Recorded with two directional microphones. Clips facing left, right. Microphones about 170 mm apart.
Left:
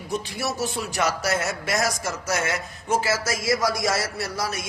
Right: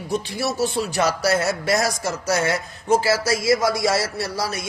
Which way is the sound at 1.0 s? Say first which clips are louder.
Right 4 dB; 35° right (ahead or behind).